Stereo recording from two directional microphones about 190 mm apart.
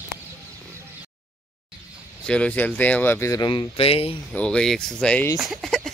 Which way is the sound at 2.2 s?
5° left (ahead or behind).